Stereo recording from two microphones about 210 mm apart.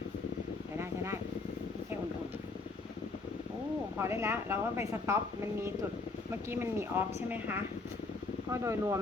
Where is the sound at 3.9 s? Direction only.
10° right (ahead or behind).